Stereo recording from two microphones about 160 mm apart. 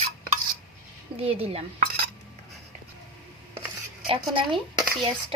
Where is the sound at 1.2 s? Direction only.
40° right (ahead or behind).